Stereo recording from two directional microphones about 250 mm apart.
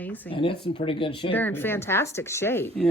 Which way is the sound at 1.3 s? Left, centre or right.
Centre.